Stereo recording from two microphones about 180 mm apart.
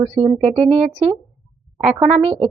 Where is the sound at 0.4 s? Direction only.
35° right (ahead or behind).